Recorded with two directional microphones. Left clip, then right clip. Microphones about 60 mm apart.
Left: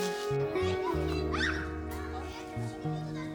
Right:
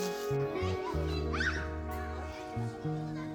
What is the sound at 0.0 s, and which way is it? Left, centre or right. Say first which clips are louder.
Music: left 2 dB; centre.